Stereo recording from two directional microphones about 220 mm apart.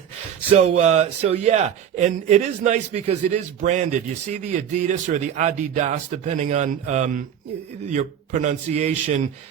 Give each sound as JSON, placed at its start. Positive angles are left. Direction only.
{"t": 0.5, "sound": "a man's voice", "side_deg": -30}